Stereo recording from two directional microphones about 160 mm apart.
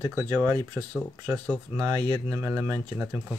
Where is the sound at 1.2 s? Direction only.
15° right (ahead or behind).